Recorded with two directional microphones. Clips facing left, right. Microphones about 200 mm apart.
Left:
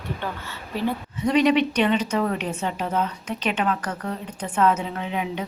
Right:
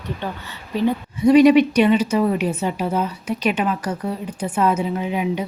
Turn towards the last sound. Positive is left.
turn(degrees=-10)  # may be behind; listen again after turning